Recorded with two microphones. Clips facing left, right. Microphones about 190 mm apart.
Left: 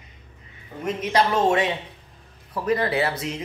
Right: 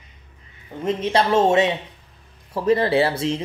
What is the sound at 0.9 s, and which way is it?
Speech, 30° right (ahead or behind).